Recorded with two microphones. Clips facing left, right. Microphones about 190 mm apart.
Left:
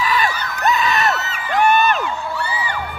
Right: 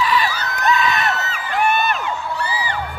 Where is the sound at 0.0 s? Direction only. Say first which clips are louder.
Even; 45° left (ahead or behind).